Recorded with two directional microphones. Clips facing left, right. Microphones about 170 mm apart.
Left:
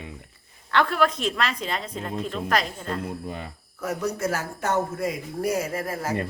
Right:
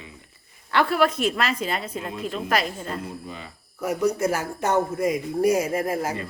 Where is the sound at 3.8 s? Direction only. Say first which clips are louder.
Right 4 dB; 10° right (ahead or behind).